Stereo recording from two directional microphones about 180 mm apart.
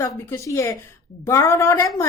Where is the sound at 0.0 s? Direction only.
15° left (ahead or behind).